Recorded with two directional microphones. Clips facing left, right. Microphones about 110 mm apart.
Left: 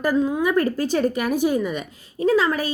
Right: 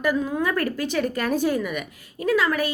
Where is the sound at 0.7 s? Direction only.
35° left (ahead or behind).